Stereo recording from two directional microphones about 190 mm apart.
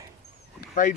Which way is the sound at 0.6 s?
45° left (ahead or behind).